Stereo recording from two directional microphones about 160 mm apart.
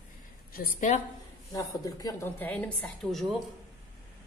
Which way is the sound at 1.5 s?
20° left (ahead or behind).